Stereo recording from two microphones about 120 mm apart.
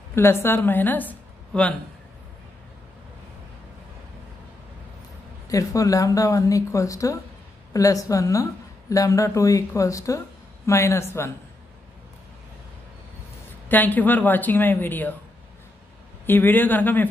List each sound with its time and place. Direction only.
0.1 s a woman's voice: 20° left (ahead or behind)
5.5 s speech: 30° left (ahead or behind)
13.7 s a woman's voice: 15° left (ahead or behind)
16.3 s a woman's voice: 15° left (ahead or behind)